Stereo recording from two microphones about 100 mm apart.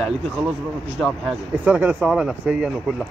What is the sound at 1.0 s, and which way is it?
Speech, 10° left (ahead or behind).